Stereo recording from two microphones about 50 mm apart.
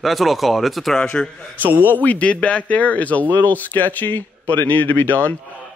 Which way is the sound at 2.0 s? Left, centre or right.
Left.